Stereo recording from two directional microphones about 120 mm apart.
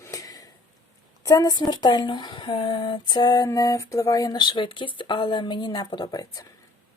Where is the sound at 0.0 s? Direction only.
30° left (ahead or behind).